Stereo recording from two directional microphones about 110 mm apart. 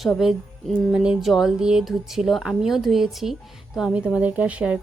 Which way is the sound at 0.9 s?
Centre (ahead or behind).